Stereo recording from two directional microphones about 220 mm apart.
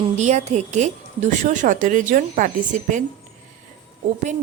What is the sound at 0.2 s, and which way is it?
Speech, 30° right (ahead or behind).